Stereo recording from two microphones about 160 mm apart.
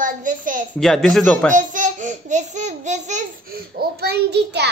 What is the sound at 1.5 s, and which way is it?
A child's voice, 55° right (ahead or behind).